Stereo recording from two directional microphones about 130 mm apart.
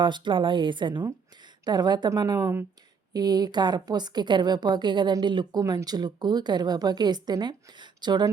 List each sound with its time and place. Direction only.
0.0 s a woman's voice: 35° right (ahead or behind)